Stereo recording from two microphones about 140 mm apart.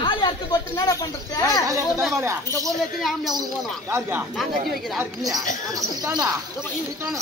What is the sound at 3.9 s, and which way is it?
A man's voice, 15° right (ahead or behind).